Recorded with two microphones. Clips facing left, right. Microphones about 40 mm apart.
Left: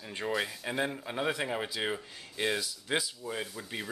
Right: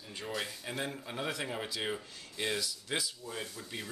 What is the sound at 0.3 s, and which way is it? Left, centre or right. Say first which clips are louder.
Speech: left 5 dB; centre.